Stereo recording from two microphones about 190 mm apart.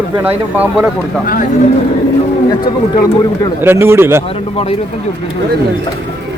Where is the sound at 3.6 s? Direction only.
15° right (ahead or behind).